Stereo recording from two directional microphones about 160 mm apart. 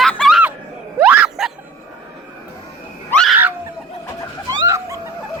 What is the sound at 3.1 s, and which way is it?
Screaming, 5° left (ahead or behind).